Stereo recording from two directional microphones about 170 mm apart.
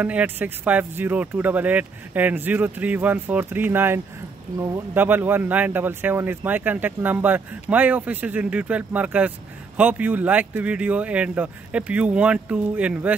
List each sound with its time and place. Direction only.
0.0 s speech: 10° right (ahead or behind)